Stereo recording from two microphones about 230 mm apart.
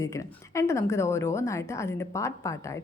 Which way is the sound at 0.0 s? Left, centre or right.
Centre.